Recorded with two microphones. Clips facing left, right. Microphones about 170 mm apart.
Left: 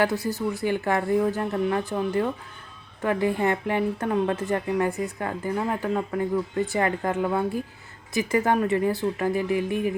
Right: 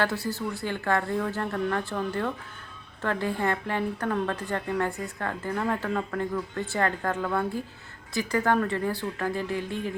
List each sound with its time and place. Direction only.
0.0 s speech: 20° left (ahead or behind)